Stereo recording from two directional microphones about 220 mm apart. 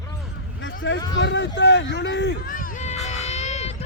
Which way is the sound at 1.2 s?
55° left (ahead or behind).